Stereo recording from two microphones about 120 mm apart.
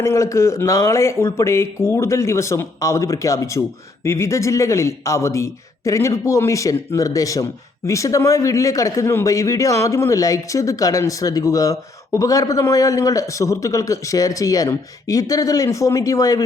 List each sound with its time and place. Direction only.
0.0 s a man's voice: 25° left (ahead or behind)